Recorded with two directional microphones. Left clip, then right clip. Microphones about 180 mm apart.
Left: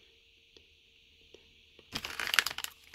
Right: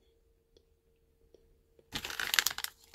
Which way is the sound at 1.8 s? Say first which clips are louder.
Even; 5° left (ahead or behind).